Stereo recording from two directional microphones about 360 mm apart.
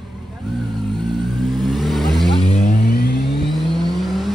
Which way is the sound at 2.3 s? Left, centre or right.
Centre.